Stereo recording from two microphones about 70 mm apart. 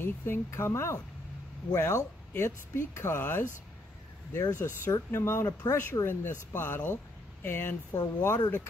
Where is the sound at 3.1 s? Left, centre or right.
Left.